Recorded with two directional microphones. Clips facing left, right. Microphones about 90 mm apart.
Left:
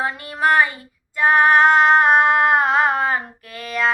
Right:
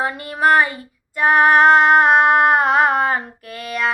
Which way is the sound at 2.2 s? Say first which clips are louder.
Right 2 dB; 35° right (ahead or behind).